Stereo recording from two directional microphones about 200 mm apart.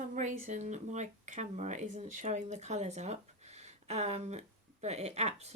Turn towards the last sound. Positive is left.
turn(degrees=-35)  # may be behind; listen again after turning